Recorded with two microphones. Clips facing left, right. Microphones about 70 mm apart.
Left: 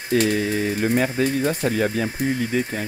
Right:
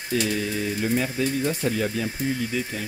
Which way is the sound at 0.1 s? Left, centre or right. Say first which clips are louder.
Left 5 dB; left.